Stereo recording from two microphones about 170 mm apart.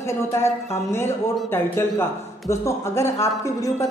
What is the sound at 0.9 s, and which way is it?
A woman's voice, 15° left (ahead or behind).